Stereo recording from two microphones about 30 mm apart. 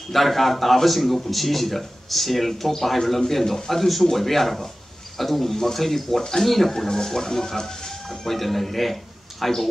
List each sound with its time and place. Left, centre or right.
0.1 s a man's voice: centre
6.7 s speech: centre
8.3 s a man's voice: centre